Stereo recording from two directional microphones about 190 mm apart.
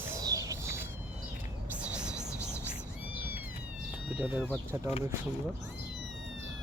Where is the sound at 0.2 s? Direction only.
20° right (ahead or behind).